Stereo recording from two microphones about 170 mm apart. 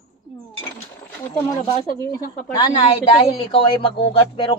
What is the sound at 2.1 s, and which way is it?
Speech, 60° left (ahead or behind).